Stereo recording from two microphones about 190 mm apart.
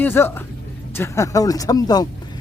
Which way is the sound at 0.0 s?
10° left (ahead or behind).